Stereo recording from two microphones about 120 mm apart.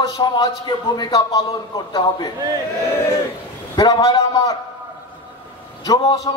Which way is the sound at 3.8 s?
30° left (ahead or behind).